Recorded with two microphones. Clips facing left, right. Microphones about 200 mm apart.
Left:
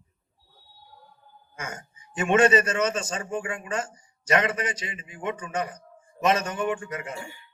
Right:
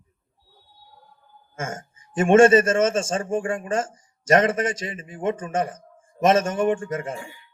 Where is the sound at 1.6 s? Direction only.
45° right (ahead or behind).